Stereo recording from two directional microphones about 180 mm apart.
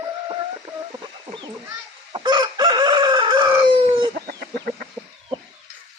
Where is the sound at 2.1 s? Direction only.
25° right (ahead or behind).